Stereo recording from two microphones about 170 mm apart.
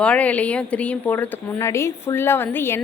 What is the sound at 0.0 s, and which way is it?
A woman's voice, 5° left (ahead or behind).